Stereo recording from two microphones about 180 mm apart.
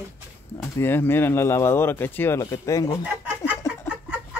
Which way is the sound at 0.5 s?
10° left (ahead or behind).